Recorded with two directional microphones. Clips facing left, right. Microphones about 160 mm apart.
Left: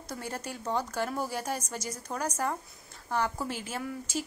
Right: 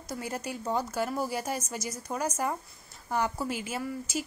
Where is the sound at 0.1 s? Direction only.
10° right (ahead or behind).